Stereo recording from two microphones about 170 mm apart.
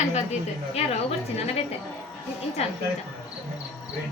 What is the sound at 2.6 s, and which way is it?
Speech, 40° left (ahead or behind).